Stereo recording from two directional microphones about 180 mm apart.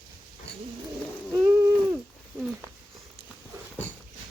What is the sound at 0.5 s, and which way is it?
Cat, 70° left (ahead or behind).